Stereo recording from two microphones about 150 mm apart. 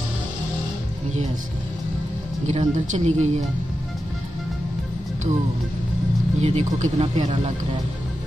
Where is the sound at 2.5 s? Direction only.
50° right (ahead or behind).